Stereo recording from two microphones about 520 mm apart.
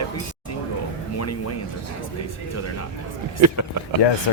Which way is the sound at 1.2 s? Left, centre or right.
Left.